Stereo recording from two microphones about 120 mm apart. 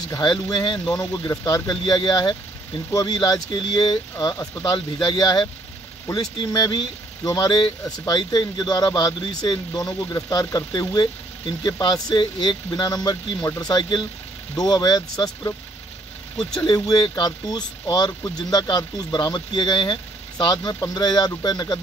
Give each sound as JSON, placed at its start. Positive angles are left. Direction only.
{"t": 0.1, "sound": "speech", "side_deg": 35}
{"t": 16.6, "sound": "speech", "side_deg": 35}